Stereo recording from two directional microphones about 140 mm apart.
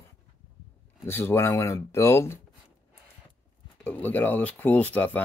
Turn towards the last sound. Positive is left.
turn(degrees=10)  # may be behind; listen again after turning